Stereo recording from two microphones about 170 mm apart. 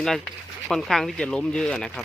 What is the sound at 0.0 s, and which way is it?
Speech, 5° left (ahead or behind).